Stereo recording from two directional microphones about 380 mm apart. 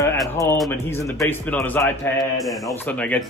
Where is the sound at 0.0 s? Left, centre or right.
Centre.